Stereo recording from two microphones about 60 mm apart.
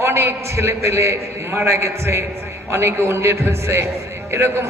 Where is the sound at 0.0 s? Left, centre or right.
Right.